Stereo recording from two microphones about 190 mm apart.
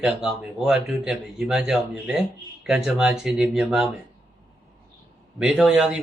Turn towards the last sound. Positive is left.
turn(degrees=-5)  # may be behind; listen again after turning